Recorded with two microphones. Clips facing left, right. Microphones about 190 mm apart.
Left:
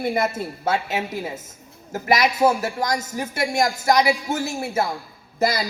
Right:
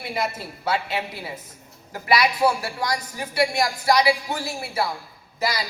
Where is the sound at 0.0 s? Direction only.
50° left (ahead or behind).